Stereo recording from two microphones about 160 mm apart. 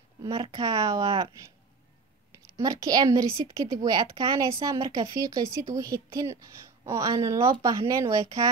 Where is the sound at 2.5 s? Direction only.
20° right (ahead or behind).